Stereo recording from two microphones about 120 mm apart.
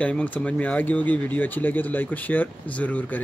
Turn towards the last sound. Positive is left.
turn(degrees=10)  # may be behind; listen again after turning